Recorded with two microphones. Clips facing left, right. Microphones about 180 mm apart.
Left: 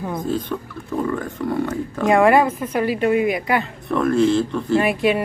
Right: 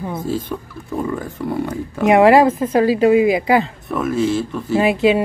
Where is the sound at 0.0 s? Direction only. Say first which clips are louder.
Right 1 dB; 5° right (ahead or behind); by 3.6 s 25° right (ahead or behind).